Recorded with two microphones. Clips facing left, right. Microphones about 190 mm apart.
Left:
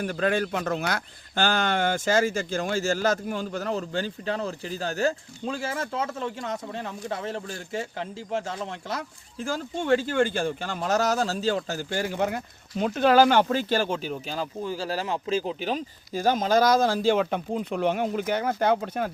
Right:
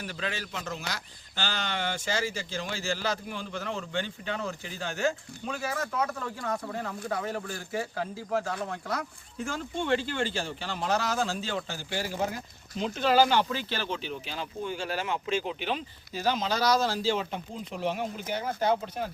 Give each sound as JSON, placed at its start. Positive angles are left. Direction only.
{"t": 0.0, "sound": "speech", "side_deg": 50}
{"t": 9.7, "sound": "speech", "side_deg": 45}